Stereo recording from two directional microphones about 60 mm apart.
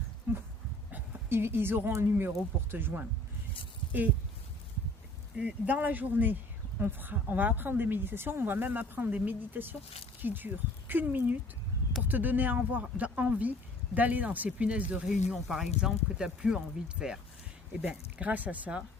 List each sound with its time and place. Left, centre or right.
0.3 s speech: right
5.4 s speech: right
15.0 s speech: centre
17.8 s speech: right